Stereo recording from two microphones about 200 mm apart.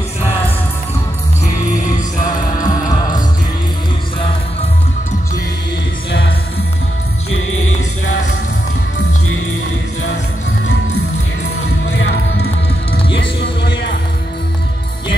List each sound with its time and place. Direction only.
2.2 s music: 20° left (ahead or behind)
13.1 s music: 60° left (ahead or behind)